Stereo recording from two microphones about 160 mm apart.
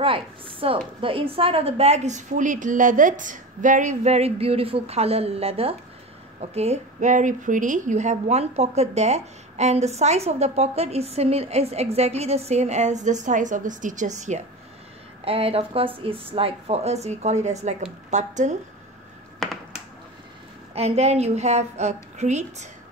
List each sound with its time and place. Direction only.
0.0 s a woman's voice: 35° right (ahead or behind)
15.2 s a woman's voice: 35° right (ahead or behind)
19.4 s finger snapping: centre (ahead or behind)
20.7 s a woman's voice: 40° right (ahead or behind)